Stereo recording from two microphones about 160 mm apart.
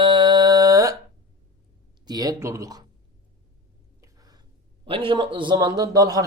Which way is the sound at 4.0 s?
25° right (ahead or behind).